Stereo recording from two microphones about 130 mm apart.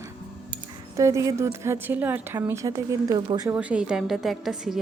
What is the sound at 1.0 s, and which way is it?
Speech, 25° right (ahead or behind).